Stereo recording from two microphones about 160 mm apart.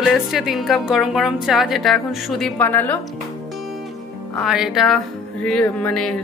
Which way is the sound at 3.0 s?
Centre (ahead or behind).